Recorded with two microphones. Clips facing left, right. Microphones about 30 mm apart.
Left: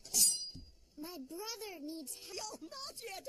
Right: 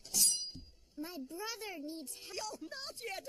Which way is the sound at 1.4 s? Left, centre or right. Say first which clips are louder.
Right 3 dB; right.